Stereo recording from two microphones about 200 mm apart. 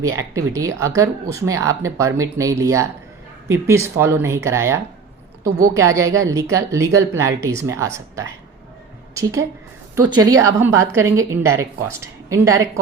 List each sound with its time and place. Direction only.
0.2 s a woman's voice: 15° right (ahead or behind)